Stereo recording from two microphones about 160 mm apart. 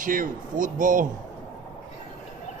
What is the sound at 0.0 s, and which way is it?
Speech, 55° right (ahead or behind).